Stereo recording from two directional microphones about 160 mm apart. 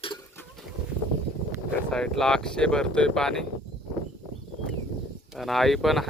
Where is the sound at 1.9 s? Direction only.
5° left (ahead or behind).